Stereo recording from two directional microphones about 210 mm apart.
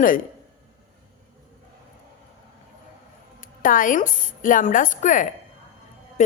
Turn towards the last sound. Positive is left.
turn(degrees=35)  # may be behind; listen again after turning